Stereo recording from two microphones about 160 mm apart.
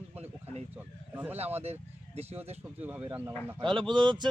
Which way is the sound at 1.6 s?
40° right (ahead or behind).